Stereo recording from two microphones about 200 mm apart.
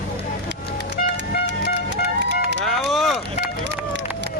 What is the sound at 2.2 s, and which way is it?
Run, 60° right (ahead or behind).